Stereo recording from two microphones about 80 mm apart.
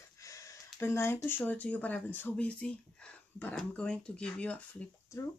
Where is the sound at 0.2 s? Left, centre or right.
Left.